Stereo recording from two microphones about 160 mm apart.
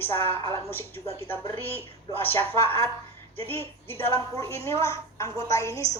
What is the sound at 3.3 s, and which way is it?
A woman's voice, 10° left (ahead or behind).